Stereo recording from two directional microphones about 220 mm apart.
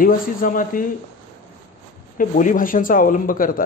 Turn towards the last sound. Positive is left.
turn(degrees=40)  # may be behind; listen again after turning